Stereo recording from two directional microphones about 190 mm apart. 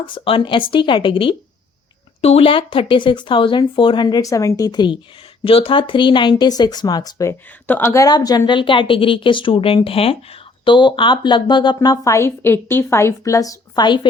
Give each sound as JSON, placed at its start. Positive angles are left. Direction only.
{"t": 0.0, "sound": "speech", "side_deg": 25}